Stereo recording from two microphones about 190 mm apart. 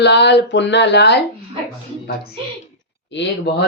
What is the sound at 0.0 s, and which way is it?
A man's voice, 65° left (ahead or behind).